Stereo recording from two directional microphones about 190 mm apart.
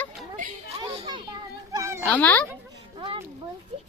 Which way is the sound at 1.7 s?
15° right (ahead or behind).